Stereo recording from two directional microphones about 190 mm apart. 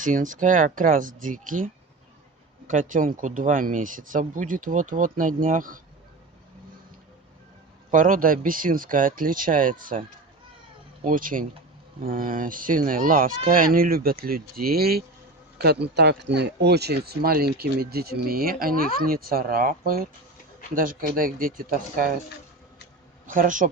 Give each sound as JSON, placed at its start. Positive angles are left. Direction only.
{"t": 0.0, "sound": "speech", "side_deg": -45}
{"t": 7.9, "sound": "speech", "side_deg": -45}
{"t": 11.0, "sound": "speech", "side_deg": -45}
{"t": 21.2, "sound": "speech", "side_deg": -50}
{"t": 23.2, "sound": "speech", "side_deg": -45}